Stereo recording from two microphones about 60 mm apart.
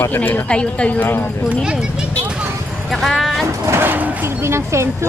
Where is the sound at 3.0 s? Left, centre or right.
Centre.